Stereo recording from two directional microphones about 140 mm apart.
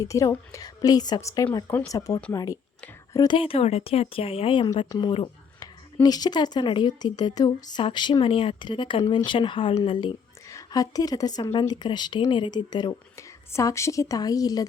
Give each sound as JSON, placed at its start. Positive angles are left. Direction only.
{"t": 0.0, "sound": "a woman's voice", "side_deg": 25}
{"t": 3.3, "sound": "a woman's voice", "side_deg": 40}
{"t": 12.9, "sound": "a woman's voice", "side_deg": 20}